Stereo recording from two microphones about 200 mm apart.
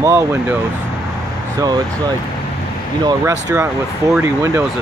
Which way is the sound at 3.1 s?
15° right (ahead or behind).